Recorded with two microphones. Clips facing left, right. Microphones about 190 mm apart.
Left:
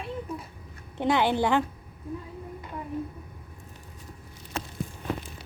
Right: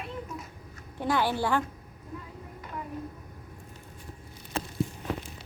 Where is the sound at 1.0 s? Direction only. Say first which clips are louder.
Left 4 dB; 20° left (ahead or behind).